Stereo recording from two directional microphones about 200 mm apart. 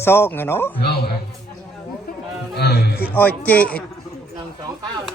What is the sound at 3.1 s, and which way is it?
Speech, 10° left (ahead or behind).